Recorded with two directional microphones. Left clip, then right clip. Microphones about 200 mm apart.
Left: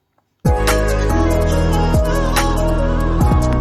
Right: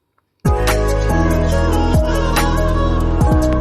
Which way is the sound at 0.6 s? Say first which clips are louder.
Even; centre (ahead or behind).